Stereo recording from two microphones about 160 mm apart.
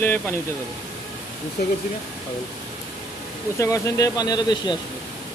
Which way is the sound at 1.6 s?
80° left.